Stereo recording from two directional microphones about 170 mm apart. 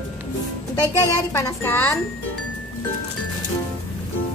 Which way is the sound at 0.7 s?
20° left (ahead or behind).